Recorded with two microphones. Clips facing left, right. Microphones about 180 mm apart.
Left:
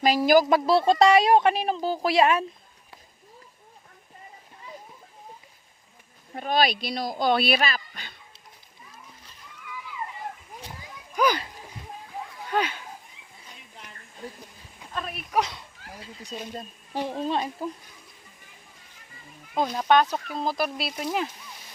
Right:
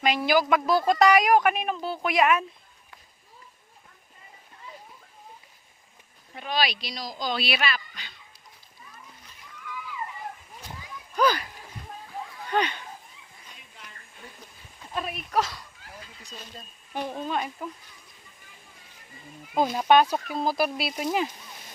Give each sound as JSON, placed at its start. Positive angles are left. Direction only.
{"t": 0.0, "sound": "speech", "side_deg": 35}
{"t": 0.4, "sound": "speech", "side_deg": 30}
{"t": 6.3, "sound": "speech", "side_deg": 45}
{"t": 11.1, "sound": "a sound", "side_deg": 10}
{"t": 12.5, "sound": "speech", "side_deg": 5}
{"t": 15.4, "sound": "speech", "side_deg": 20}
{"t": 16.9, "sound": "speech", "side_deg": 30}
{"t": 19.5, "sound": "speech", "side_deg": -10}